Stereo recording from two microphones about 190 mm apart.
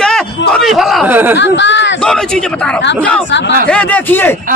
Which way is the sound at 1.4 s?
70° left (ahead or behind).